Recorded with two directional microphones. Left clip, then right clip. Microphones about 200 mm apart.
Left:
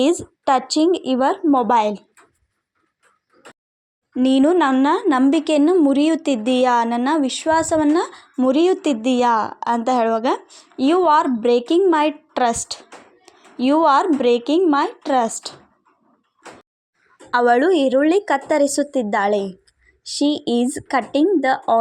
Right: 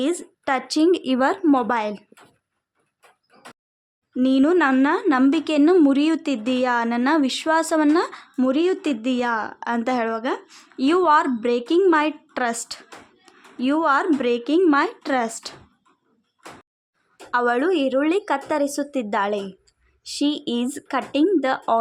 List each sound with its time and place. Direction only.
0.0 s speech: 10° left (ahead or behind)
0.9 s a woman's voice: centre (ahead or behind)
4.1 s a woman's voice: 15° left (ahead or behind); by 8.4 s centre (ahead or behind)
8.4 s speech: 10° left (ahead or behind)
10.4 s a woman's voice: centre (ahead or behind)
17.3 s speech: 15° left (ahead or behind)